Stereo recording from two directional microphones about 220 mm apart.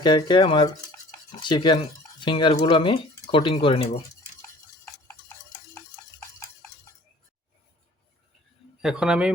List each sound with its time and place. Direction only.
0.0 s speech: 20° left (ahead or behind)
5.0 s stir: 15° left (ahead or behind)
8.8 s a man's voice: 5° right (ahead or behind)